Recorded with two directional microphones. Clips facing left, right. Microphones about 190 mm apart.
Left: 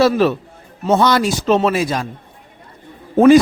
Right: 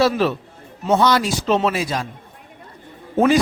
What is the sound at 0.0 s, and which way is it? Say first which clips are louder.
A man's voice: left 4 dB; 50° left (ahead or behind).